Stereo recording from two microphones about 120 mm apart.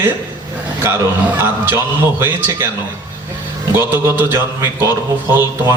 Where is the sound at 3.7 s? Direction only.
20° right (ahead or behind).